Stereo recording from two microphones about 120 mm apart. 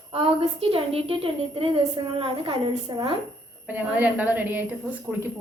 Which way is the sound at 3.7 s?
15° right (ahead or behind).